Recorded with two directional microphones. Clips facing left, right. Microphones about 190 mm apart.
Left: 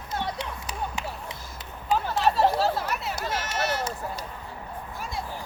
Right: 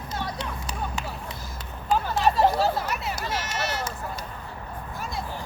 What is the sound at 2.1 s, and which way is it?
Chatter, centre (ahead or behind).